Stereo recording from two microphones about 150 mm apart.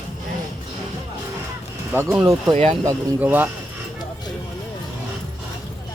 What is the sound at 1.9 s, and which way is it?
Speech, 10° right (ahead or behind).